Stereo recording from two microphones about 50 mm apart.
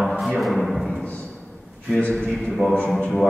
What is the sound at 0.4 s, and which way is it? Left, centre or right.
Timpani, centre.